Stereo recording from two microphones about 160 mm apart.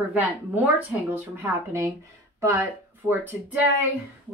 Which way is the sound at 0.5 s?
10° right (ahead or behind).